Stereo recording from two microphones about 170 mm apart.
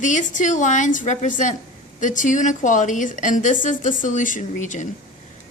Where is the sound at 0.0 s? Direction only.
45° left (ahead or behind).